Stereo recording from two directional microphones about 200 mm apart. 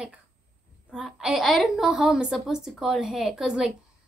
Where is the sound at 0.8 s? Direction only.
Centre (ahead or behind).